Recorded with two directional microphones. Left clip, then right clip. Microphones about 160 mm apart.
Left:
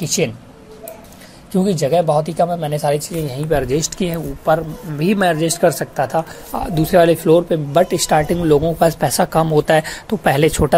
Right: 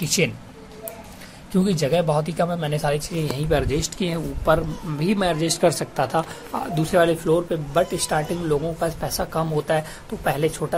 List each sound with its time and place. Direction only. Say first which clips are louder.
0.0 s speech: left 3 dB; 15° left (ahead or behind)
1.5 s speech: left 5 dB; 15° left (ahead or behind)
4.5 s a man's voice: left 4 dB; centre (ahead or behind)
4.9 s speech: left 7 dB; 20° left (ahead or behind); by 6.2 s 5° left (ahead or behind)
6.5 s speech: left 6 dB; 25° left (ahead or behind); by 10.7 s 50° left (ahead or behind)